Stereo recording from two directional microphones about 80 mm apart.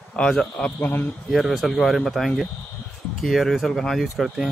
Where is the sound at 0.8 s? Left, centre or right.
Left.